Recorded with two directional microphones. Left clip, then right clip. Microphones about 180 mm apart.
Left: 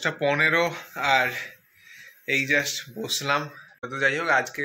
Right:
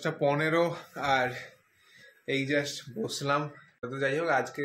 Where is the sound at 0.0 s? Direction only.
5° right (ahead or behind).